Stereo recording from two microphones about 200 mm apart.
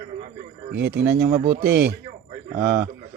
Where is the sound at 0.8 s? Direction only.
55° right (ahead or behind).